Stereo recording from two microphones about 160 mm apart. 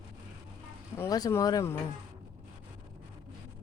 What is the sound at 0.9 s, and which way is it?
Speech, 20° left (ahead or behind).